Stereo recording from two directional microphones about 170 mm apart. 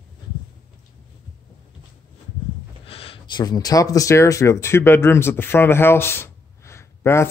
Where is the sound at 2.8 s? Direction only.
35° left (ahead or behind).